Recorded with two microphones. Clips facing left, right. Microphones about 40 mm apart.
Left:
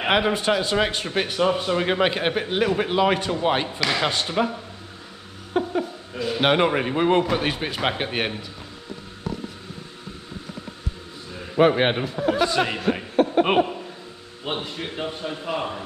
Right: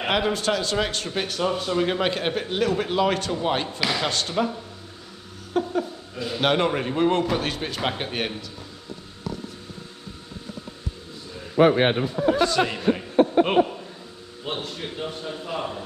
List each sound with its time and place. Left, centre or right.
0.0 s a man's voice: centre
5.5 s a sound: centre
7.2 s a man's voice: centre
12.4 s a man's voice: centre
12.9 s chuckle: centre
14.4 s a man's voice: centre